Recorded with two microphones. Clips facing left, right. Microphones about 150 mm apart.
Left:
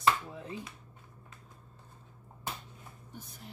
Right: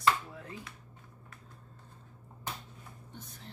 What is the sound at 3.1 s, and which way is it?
Speech, 10° left (ahead or behind).